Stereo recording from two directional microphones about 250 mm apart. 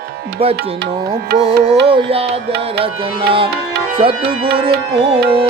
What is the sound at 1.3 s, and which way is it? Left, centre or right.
Music, right.